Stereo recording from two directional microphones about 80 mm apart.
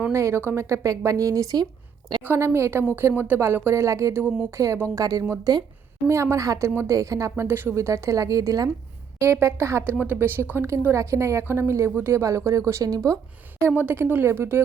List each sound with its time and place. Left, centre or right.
0.1 s speech: right
2.2 s speech: right
6.1 s speech: right
7.8 s speech: right
9.2 s speech: right
9.9 s speech: right
13.7 s speech: right